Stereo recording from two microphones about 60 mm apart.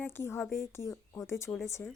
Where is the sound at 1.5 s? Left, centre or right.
Left.